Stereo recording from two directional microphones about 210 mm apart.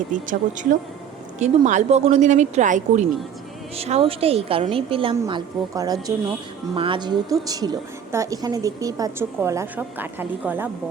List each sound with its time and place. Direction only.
0.1 s a woman's voice: 35° right (ahead or behind); by 10.7 s 10° right (ahead or behind)